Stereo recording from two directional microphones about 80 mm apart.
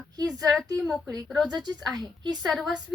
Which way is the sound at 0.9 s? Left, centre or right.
Centre.